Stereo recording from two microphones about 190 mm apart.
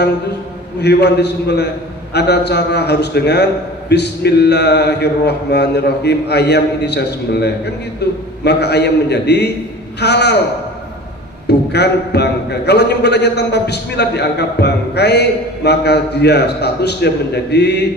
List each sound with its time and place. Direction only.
0.7 s a man's voice: 60° left (ahead or behind)
11.4 s a man's voice: 60° left (ahead or behind)